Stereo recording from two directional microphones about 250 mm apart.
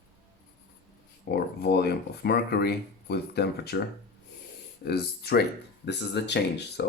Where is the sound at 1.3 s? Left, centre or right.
Left.